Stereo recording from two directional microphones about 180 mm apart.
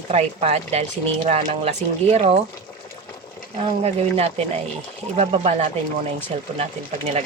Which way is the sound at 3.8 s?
35° right (ahead or behind).